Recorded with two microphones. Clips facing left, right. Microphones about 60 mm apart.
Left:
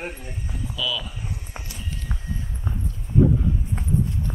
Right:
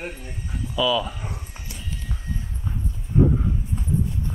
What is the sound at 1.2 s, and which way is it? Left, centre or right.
Speech, right.